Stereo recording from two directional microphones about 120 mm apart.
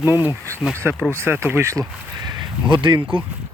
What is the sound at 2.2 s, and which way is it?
Speech, 35° right (ahead or behind).